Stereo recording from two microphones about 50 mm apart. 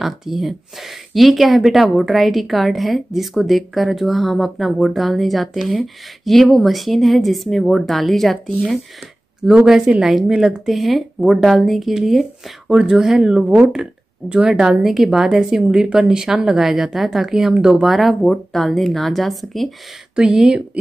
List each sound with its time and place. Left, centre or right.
0.0 s speech: centre
9.7 s a woman's voice: centre
17.8 s speech: centre
20.2 s a woman's voice: centre